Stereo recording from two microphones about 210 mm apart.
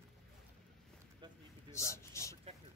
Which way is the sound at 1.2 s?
20° right (ahead or behind).